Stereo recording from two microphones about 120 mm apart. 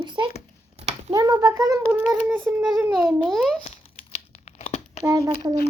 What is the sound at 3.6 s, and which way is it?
Tearing, 65° left (ahead or behind).